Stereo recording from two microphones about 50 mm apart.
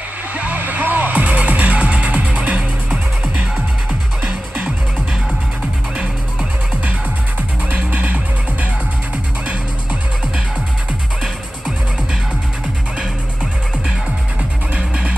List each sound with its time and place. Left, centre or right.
0.3 s music: right
7.7 s music: right
13.0 s music: centre
14.7 s music: right